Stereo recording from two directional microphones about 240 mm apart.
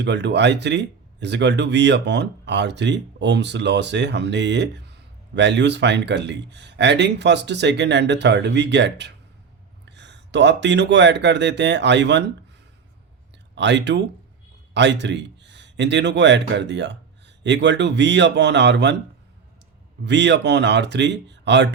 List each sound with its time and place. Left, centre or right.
0.0 s speech: right
13.6 s speech: right
20.1 s speech: right